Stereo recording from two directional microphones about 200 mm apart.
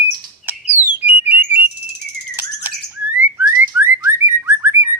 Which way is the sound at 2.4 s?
10° right (ahead or behind).